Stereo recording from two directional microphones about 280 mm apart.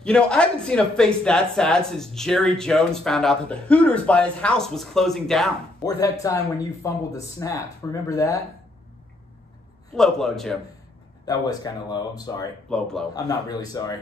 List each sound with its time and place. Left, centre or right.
0.0 s speech: centre
5.8 s speech: centre
9.9 s speech: centre
11.2 s speech: centre
12.6 s speech: centre
13.1 s speech: centre